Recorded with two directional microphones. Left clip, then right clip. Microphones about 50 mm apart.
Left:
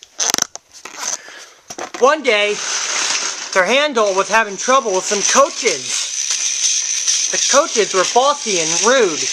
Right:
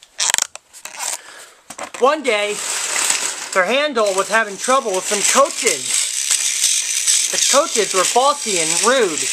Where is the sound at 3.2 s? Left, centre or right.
Right.